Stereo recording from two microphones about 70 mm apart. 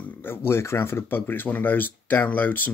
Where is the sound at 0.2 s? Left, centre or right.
Left.